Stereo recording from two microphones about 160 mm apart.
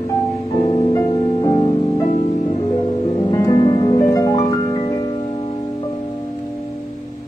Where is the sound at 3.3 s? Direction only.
25° left (ahead or behind).